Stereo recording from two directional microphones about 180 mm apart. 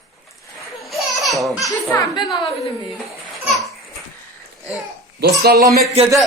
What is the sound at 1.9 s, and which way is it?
Speech, 25° left (ahead or behind).